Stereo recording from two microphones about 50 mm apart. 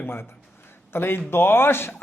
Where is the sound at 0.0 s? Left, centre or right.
Left.